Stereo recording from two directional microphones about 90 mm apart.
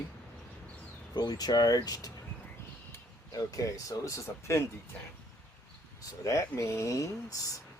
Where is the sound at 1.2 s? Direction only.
50° left (ahead or behind).